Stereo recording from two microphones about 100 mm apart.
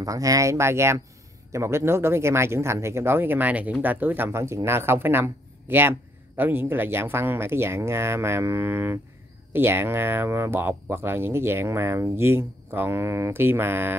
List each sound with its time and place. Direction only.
0.0 s speech: 35° right (ahead or behind)